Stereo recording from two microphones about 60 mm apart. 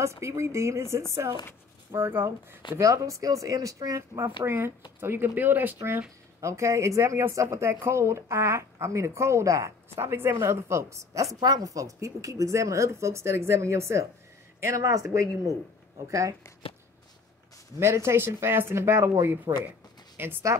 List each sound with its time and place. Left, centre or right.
0.0 s a woman's voice: right
2.0 s speech: right
2.8 s speech: right
4.2 s speech: right
6.4 s a woman's voice: right
9.9 s a woman's voice: right
11.3 s a woman's voice: right
16.1 s speech: right
17.7 s a woman's voice: right
20.2 s speech: right